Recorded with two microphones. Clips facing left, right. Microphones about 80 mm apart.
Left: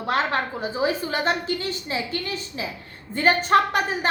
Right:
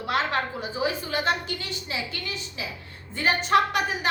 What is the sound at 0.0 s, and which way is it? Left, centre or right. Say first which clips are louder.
A woman's voice: left 2 dB; left.